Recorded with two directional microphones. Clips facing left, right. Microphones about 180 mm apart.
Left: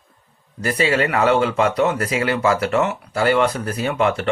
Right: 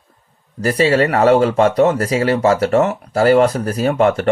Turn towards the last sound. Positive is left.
turn(degrees=-45)  # may be behind; listen again after turning